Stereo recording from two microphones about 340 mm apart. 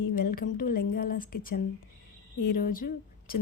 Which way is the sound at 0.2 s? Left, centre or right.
Left.